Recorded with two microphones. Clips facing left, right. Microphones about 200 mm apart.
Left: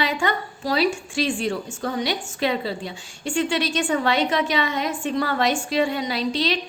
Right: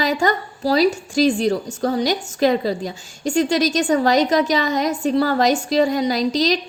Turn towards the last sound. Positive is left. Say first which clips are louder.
# right 5 dB
turn(degrees=-40)  # may be behind; listen again after turning